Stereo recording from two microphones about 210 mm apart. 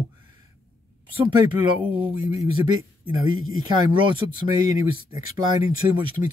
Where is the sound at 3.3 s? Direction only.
75° right (ahead or behind).